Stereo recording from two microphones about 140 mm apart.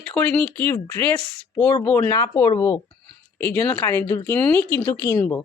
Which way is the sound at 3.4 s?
10° left (ahead or behind).